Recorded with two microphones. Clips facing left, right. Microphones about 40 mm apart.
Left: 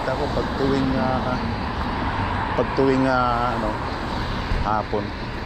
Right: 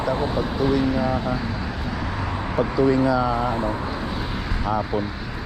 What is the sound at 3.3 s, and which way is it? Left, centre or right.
Speech, left.